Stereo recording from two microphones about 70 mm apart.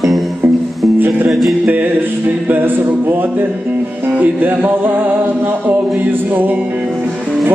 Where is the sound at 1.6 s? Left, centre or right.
Right.